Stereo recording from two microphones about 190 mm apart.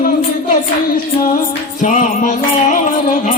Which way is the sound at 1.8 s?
40° left (ahead or behind).